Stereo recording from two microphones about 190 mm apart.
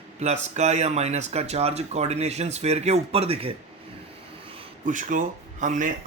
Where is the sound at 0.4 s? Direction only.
35° right (ahead or behind).